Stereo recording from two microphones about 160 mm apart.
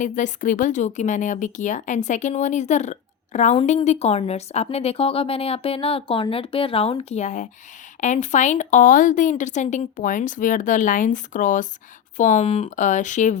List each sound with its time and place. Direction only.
0.0 s a woman's voice: 55° left (ahead or behind)